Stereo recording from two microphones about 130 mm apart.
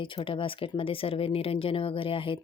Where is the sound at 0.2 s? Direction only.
40° left (ahead or behind).